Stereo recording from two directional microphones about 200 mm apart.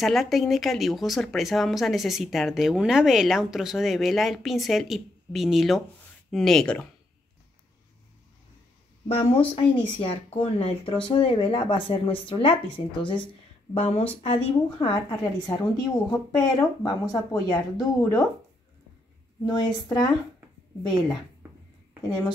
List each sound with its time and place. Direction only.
0.0 s speech: centre (ahead or behind)
9.0 s speech: 30° left (ahead or behind)
19.4 s speech: 20° left (ahead or behind)